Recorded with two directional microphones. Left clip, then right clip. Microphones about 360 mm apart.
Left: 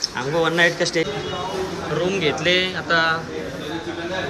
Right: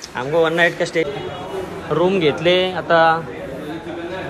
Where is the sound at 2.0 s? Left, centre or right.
Centre.